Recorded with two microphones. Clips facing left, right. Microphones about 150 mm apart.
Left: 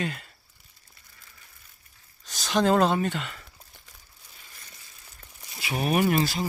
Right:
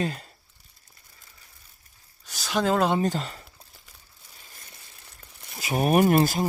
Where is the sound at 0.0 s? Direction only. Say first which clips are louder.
Right 3 dB; 35° right (ahead or behind).